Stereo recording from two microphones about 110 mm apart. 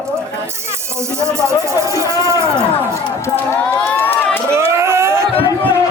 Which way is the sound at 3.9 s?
20° left (ahead or behind).